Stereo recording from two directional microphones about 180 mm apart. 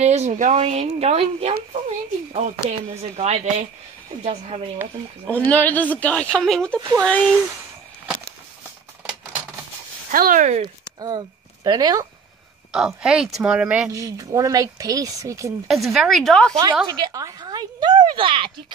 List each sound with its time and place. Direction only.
0.0 s speech: 40° right (ahead or behind)
5.2 s speech: 10° left (ahead or behind)
7.2 s speech: 10° right (ahead or behind)
10.1 s speech: 50° right (ahead or behind)
11.0 s speech: 20° right (ahead or behind)
12.7 s speech: 5° right (ahead or behind)
13.9 s speech: 20° right (ahead or behind)
15.7 s speech: centre (ahead or behind)
16.8 s speech: 25° right (ahead or behind)